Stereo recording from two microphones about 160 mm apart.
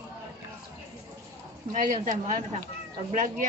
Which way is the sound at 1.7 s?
50° right (ahead or behind).